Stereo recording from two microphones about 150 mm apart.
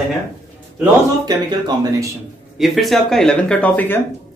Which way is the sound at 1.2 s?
30° right (ahead or behind).